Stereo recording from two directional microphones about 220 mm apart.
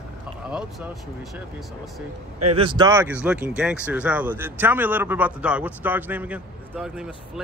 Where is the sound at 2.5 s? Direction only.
20° right (ahead or behind).